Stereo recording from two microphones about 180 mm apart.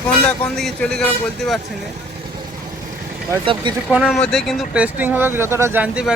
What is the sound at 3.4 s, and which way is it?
Speech, 30° right (ahead or behind).